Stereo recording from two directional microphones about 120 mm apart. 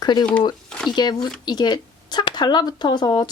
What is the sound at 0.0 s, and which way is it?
Speech, 35° left (ahead or behind).